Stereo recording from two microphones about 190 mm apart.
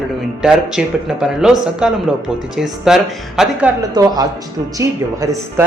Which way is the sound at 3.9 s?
20° right (ahead or behind).